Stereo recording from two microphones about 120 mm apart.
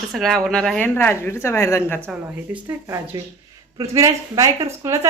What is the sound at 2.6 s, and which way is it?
A woman's voice, 25° right (ahead or behind).